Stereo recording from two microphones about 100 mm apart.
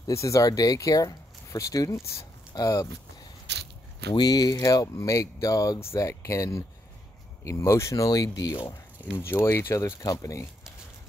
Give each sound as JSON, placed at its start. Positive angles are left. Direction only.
{"t": 0.0, "sound": "speech", "side_deg": 30}
{"t": 4.1, "sound": "speech", "side_deg": 45}
{"t": 9.0, "sound": "speech", "side_deg": 20}